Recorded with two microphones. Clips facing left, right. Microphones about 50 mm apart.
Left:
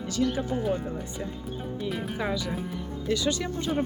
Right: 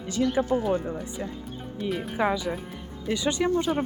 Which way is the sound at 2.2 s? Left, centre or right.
Right.